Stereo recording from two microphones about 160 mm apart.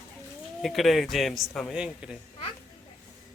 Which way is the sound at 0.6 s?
Centre (ahead or behind).